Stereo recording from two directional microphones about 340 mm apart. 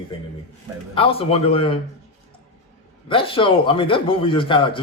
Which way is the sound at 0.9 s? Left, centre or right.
Centre.